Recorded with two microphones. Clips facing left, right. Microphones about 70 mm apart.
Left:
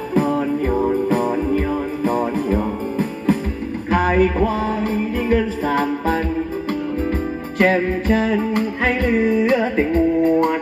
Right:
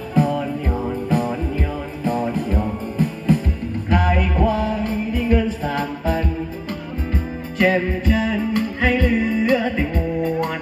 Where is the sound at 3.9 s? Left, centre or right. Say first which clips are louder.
Left 4 dB; left.